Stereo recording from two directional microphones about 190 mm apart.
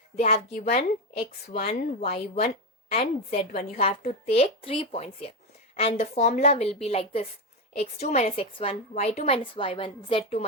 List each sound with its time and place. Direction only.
0.2 s a woman's voice: 35° left (ahead or behind)